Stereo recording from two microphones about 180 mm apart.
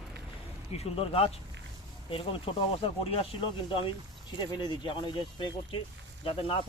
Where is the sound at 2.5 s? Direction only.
30° left (ahead or behind).